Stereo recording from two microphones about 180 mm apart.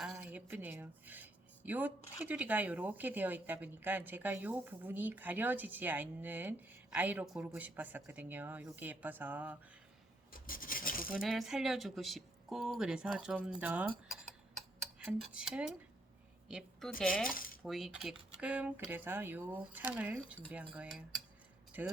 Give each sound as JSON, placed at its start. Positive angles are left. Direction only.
{"t": 0.0, "sound": "speech", "side_deg": -5}
{"t": 10.3, "sound": "filing", "side_deg": 50}
{"t": 11.1, "sound": "a woman's voice", "side_deg": 0}
{"t": 17.2, "sound": "speech", "side_deg": 50}
{"t": 17.6, "sound": "speech", "side_deg": 0}